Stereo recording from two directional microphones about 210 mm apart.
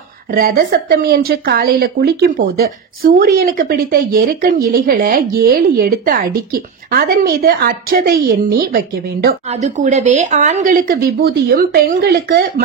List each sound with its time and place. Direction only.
0.3 s a woman's voice: 45° right (ahead or behind)
9.5 s speech: 35° right (ahead or behind)